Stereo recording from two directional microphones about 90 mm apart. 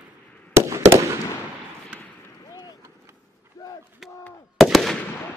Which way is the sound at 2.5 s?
50° left (ahead or behind).